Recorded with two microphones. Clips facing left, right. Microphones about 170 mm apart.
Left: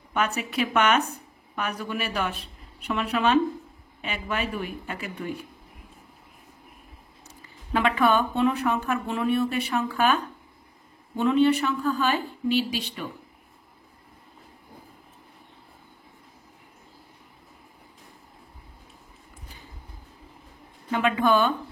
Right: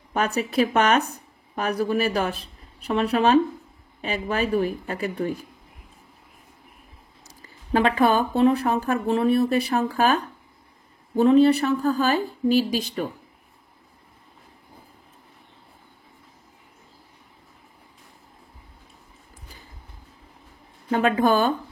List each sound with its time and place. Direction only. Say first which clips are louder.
0.1 s a woman's voice: right 3 dB; 35° right (ahead or behind)
7.2 s speech: right 7 dB; 35° right (ahead or behind)
20.9 s speech: right 2 dB; 40° right (ahead or behind)